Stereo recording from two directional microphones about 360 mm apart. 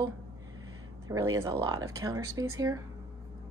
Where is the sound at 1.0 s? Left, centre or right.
Centre.